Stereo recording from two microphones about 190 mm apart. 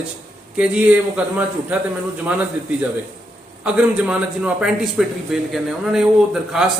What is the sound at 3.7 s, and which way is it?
A man's voice, 5° right (ahead or behind).